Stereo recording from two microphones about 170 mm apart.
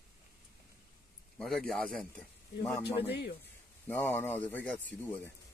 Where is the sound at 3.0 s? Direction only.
75° left (ahead or behind).